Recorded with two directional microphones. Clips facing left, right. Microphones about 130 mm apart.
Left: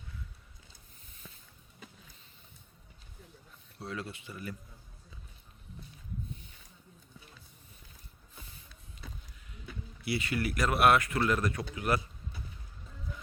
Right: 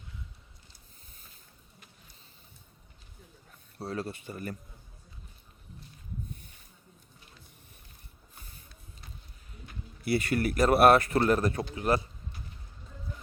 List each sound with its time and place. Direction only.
3.8 s speech: 40° right (ahead or behind)
10.0 s speech: 50° right (ahead or behind)
10.6 s speech: 35° right (ahead or behind)